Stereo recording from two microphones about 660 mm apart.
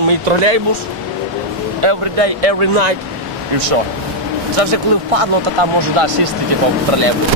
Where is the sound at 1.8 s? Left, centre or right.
Right.